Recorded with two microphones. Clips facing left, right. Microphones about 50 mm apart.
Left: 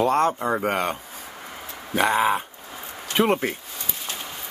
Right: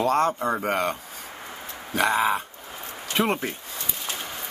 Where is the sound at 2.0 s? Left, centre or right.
Centre.